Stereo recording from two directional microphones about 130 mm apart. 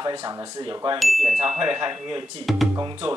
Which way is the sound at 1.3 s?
30° right (ahead or behind).